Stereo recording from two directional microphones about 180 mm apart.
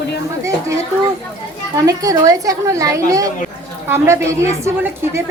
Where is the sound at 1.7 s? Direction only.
20° right (ahead or behind).